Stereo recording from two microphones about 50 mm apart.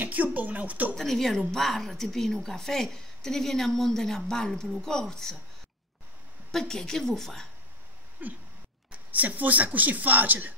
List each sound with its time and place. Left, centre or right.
0.0 s speech: right
0.9 s a woman's voice: centre
6.5 s a woman's voice: centre
8.2 s a sound: right
9.1 s speech: right